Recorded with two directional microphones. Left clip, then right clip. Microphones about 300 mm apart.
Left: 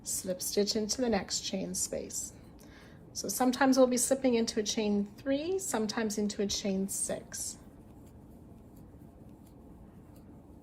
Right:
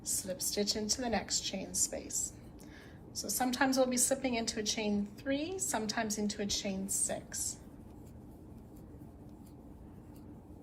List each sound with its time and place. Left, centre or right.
0.0 s a woman's voice: centre